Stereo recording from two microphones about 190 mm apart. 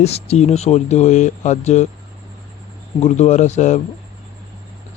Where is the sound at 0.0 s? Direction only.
35° left (ahead or behind).